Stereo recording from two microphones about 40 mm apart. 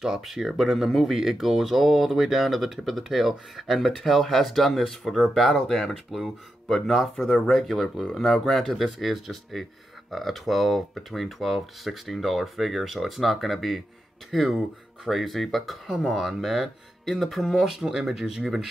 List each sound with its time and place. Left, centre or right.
0.0 s speech: centre